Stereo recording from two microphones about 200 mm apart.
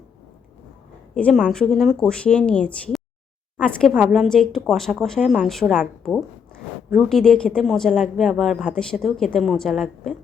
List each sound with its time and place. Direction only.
1.1 s a woman's voice: 5° left (ahead or behind)